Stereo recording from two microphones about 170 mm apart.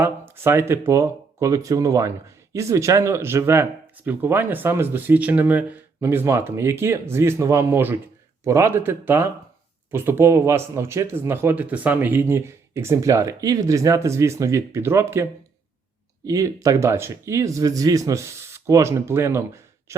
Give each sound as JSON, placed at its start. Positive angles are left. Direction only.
{"t": 0.0, "sound": "speech", "side_deg": -15}
{"t": 19.9, "sound": "throat clearing", "side_deg": -15}